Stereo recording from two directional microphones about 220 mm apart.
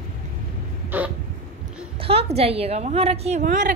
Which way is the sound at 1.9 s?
25° right (ahead or behind).